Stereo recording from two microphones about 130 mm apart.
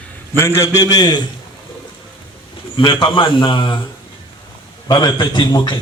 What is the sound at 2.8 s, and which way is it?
A man's voice, 40° left (ahead or behind).